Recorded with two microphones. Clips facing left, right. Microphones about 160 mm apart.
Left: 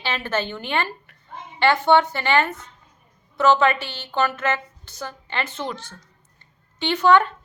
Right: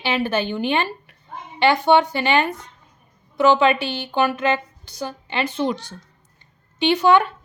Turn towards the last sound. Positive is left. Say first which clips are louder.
# right 1 dB
turn(degrees=-15)  # may be behind; listen again after turning